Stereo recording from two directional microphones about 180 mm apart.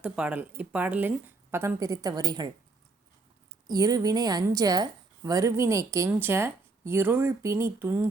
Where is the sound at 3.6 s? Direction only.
20° right (ahead or behind).